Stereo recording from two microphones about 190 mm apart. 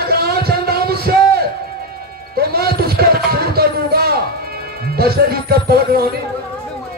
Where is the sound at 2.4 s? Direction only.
55° right (ahead or behind).